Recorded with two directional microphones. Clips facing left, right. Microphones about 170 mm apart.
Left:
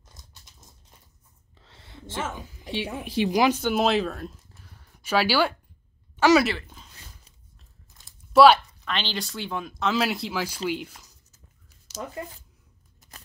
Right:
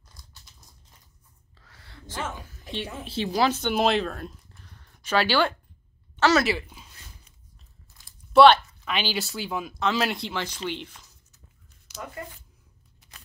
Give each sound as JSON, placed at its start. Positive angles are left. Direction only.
{"t": 0.1, "sound": "a sound", "side_deg": 20}
{"t": 2.2, "sound": "speech", "side_deg": 15}
{"t": 3.7, "sound": "speech", "side_deg": 0}
{"t": 6.1, "sound": "a sound", "side_deg": 10}
{"t": 6.4, "sound": "speech", "side_deg": -10}
{"t": 8.3, "sound": "speech", "side_deg": 5}
{"t": 8.8, "sound": "speech", "side_deg": -10}
{"t": 12.2, "sound": "speech", "side_deg": 20}
{"t": 13.0, "sound": "keys jangling", "side_deg": 45}